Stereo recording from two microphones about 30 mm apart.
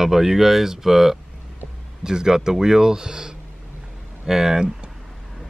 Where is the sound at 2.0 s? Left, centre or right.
Right.